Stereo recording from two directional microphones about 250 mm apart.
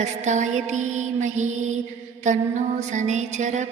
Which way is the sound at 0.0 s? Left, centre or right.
Right.